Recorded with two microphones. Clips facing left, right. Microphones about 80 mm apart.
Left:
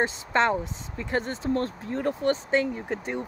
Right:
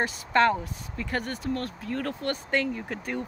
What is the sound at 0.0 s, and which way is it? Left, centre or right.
Speech, left.